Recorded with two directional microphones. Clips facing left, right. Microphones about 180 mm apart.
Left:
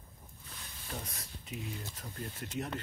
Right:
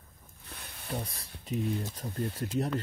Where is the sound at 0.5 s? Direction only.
60° right (ahead or behind).